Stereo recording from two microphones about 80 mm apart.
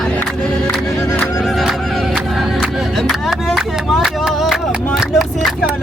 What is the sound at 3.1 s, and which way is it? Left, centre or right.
Speech, centre.